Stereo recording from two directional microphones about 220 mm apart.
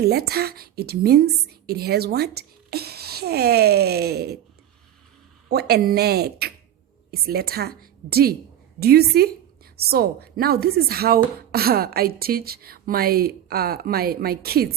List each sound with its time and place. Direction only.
0.0 s speech: 45° right (ahead or behind)
5.5 s speech: 45° right (ahead or behind)